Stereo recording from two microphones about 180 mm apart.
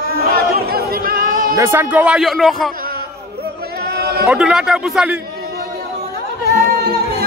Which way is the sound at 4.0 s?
60° right (ahead or behind).